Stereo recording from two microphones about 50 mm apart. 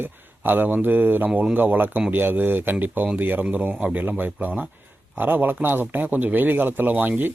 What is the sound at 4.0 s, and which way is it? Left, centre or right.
A man's voice, right.